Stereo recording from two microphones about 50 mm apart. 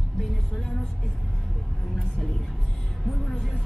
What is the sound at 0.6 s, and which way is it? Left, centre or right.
Vehicle, centre.